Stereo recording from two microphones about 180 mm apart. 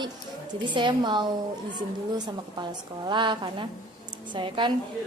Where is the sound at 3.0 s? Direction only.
25° right (ahead or behind).